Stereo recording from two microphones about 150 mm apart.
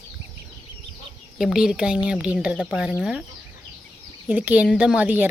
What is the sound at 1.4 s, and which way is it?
Speech, 5° right (ahead or behind).